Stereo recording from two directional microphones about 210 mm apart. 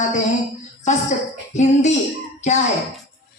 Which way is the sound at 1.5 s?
35° left (ahead or behind).